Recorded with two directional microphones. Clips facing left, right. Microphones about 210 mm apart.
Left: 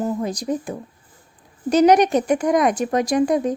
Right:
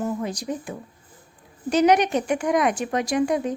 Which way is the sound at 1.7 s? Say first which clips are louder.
Left 4 dB; 40° left (ahead or behind).